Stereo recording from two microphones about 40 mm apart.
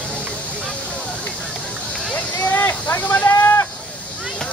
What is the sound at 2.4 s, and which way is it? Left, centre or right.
Speech, left.